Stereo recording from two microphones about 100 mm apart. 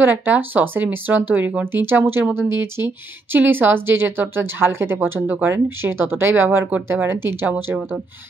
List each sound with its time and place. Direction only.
0.0 s speech: 20° right (ahead or behind)